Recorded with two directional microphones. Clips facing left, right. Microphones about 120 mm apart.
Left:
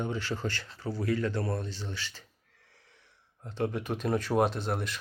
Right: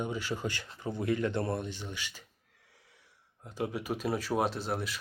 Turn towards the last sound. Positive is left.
turn(degrees=0)  # may be behind; listen again after turning